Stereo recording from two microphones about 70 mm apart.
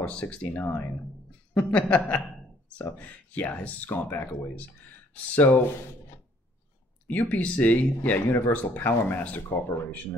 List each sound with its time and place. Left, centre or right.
0.0 s speech: centre
0.5 s speech: left
1.7 s speech: centre
7.1 s speech: left